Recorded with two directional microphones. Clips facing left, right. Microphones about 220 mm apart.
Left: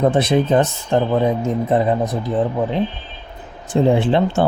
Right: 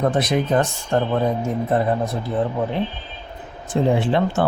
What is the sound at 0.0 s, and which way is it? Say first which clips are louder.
Speech: left 4 dB; 25° left (ahead or behind).